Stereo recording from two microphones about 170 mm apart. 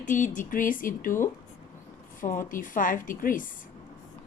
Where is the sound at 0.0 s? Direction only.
50° left (ahead or behind).